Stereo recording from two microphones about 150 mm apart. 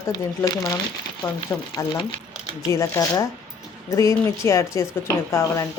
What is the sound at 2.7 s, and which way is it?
Speech, 20° left (ahead or behind).